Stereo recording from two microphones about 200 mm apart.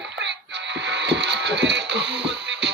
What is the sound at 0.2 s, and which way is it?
Music, 60° right (ahead or behind).